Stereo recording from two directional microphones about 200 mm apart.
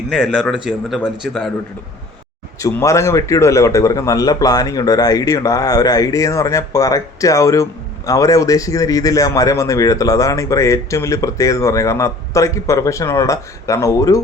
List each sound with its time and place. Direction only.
0.1 s speech: 5° left (ahead or behind)
2.6 s a man's voice: 15° left (ahead or behind)